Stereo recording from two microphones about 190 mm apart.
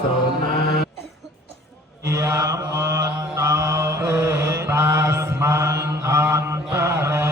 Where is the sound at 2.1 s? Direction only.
15° right (ahead or behind).